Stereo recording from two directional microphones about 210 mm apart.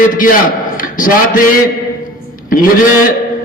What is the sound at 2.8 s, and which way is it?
Speech, 40° left (ahead or behind).